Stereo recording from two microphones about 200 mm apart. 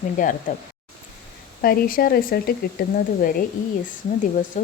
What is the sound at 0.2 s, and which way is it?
Speech, 40° left (ahead or behind).